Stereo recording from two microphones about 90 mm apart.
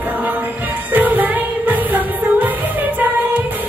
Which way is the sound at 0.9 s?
20° right (ahead or behind).